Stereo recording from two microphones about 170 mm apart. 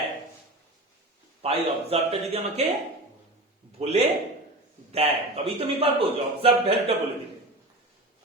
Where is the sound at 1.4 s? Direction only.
35° right (ahead or behind).